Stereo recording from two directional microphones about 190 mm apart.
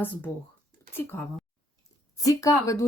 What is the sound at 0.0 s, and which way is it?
Speech, 10° left (ahead or behind).